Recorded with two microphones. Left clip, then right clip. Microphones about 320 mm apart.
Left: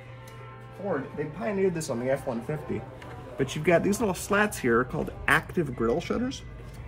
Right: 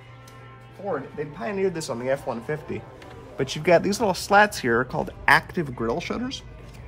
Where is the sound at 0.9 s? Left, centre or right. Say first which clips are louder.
Right 2 dB; centre.